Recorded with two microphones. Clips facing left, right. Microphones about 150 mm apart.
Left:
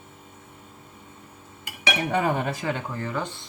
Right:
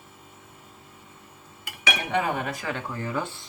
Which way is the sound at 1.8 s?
30° left (ahead or behind).